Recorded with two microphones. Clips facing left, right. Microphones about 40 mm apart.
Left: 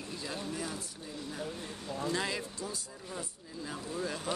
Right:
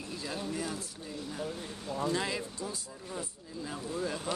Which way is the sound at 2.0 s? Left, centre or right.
Centre.